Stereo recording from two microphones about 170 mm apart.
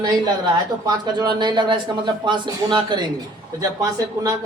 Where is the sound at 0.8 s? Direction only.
25° right (ahead or behind).